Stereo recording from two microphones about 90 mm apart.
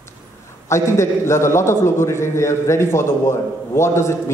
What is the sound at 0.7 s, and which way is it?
A man's voice, 30° left (ahead or behind).